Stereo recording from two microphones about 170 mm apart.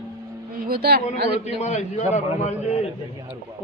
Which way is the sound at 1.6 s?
40° left (ahead or behind).